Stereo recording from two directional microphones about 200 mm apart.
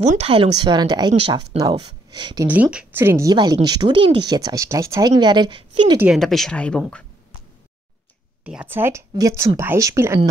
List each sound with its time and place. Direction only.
0.0 s a woman's voice: 35° right (ahead or behind)
2.4 s a woman's voice: 5° right (ahead or behind); by 5.9 s 25° right (ahead or behind)
5.9 s speech: centre (ahead or behind)
8.5 s speech: 10° right (ahead or behind)